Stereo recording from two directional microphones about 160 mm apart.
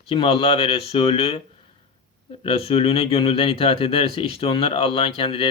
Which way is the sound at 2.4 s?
35° left (ahead or behind).